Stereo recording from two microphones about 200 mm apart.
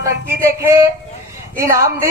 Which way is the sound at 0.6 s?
15° right (ahead or behind).